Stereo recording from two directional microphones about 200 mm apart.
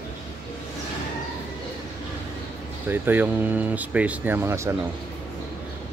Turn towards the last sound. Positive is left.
turn(degrees=-15)  # may be behind; listen again after turning